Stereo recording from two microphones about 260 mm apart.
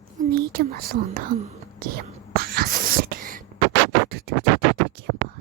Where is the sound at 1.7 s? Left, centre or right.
Right.